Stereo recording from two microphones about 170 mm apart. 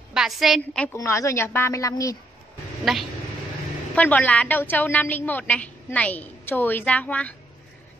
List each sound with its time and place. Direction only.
0.1 s a woman's voice: centre (ahead or behind)
0.9 s a woman's voice: 20° left (ahead or behind)
2.8 s a woman's voice: centre (ahead or behind)